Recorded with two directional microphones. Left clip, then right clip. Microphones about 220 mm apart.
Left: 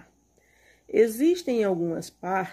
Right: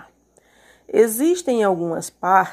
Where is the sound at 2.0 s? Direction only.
10° right (ahead or behind).